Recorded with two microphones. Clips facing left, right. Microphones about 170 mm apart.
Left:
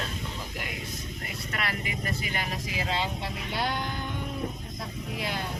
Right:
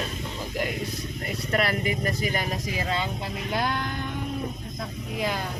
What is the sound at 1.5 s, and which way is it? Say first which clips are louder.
Speech: right 9 dB; 40° right (ahead or behind).